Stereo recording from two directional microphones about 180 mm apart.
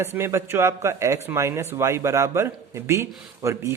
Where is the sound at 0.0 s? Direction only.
15° right (ahead or behind).